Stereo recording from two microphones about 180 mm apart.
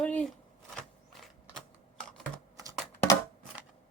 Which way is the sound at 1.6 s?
5° left (ahead or behind).